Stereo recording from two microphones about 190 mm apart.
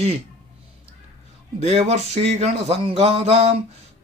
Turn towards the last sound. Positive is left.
turn(degrees=-35)  # may be behind; listen again after turning